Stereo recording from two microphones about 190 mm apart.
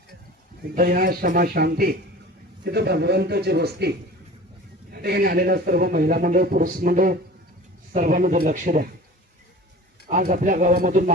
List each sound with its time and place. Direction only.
0.8 s speech: 50° right (ahead or behind)
10.1 s speech: 45° right (ahead or behind)